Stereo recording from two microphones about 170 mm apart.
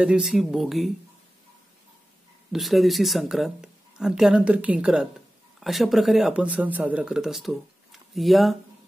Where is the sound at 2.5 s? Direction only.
Centre (ahead or behind).